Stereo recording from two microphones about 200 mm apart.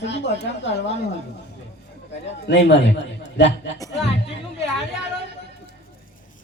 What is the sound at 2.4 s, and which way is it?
A man's voice, 60° left (ahead or behind).